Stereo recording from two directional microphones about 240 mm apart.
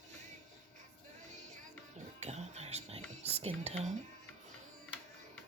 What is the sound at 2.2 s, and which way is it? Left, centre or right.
Whispering, right.